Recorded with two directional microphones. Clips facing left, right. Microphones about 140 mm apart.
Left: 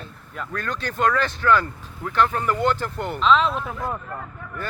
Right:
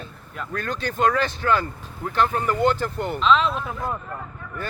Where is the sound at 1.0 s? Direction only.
15° right (ahead or behind).